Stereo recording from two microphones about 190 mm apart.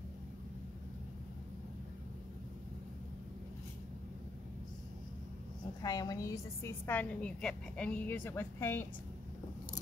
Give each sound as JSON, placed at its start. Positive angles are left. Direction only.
{"t": 5.8, "sound": "a woman's voice", "side_deg": 20}